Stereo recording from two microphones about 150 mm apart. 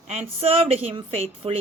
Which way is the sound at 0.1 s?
45° right (ahead or behind).